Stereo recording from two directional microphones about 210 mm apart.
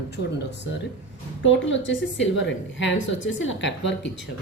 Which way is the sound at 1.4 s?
60° left (ahead or behind).